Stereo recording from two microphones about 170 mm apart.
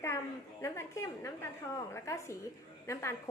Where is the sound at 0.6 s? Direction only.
15° left (ahead or behind).